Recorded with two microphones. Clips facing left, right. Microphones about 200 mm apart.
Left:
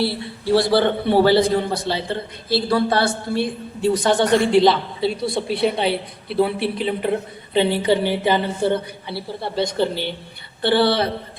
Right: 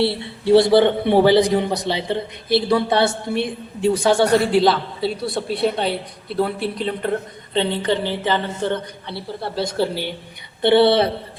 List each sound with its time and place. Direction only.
0.0 s a man's voice: 25° right (ahead or behind)
10.6 s a man's voice: 20° right (ahead or behind)